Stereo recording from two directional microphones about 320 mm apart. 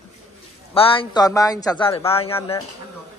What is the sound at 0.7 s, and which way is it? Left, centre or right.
Speech, centre.